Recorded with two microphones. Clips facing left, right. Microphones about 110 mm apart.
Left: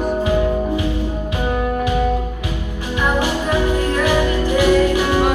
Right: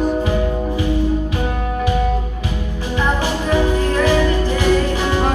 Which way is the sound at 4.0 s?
15° left (ahead or behind).